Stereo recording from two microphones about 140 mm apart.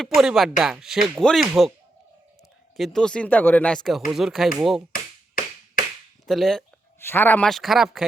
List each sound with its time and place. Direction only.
0.0 s speech: centre (ahead or behind)
2.7 s speech: centre (ahead or behind)
4.1 s speech: centre (ahead or behind)
4.9 s tap: 80° left
6.2 s speech: centre (ahead or behind)
7.0 s speech: 15° left (ahead or behind); by 8.0 s centre (ahead or behind)